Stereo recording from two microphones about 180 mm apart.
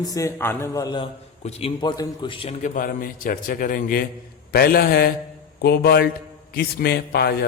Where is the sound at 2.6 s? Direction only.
50° left (ahead or behind).